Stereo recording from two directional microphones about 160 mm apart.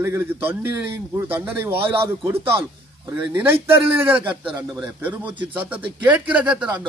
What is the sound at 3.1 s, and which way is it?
Speech, 15° right (ahead or behind).